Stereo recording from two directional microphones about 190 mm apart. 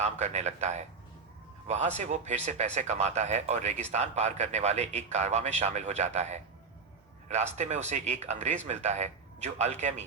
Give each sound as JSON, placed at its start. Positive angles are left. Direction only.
{"t": 0.0, "sound": "speech", "side_deg": -35}